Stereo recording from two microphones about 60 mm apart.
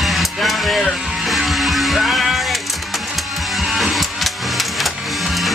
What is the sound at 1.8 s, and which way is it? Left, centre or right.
Music, centre.